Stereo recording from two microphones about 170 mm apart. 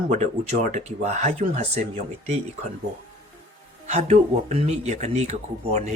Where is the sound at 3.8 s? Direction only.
40° right (ahead or behind).